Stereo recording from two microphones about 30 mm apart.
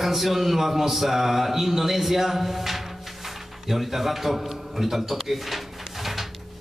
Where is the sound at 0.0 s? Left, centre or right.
Centre.